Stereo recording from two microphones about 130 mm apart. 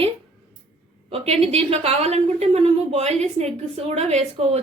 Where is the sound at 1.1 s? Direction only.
50° right (ahead or behind).